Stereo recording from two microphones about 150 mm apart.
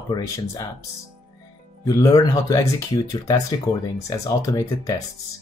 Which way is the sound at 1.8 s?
25° left (ahead or behind).